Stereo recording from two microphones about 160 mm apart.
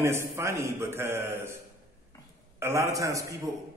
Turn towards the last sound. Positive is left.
turn(degrees=-20)  # may be behind; listen again after turning